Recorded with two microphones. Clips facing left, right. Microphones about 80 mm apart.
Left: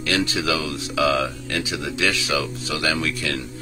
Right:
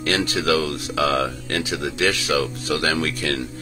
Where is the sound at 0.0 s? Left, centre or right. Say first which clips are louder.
Right 1 dB; right.